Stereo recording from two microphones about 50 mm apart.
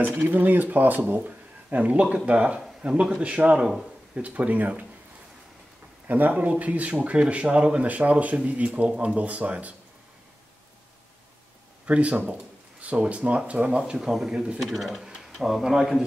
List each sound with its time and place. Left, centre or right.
0.0 s speech: right
6.0 s speech: right
11.8 s speech: right
14.6 s speech: centre